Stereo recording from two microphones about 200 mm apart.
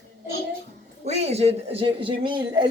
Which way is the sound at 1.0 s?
35° right (ahead or behind).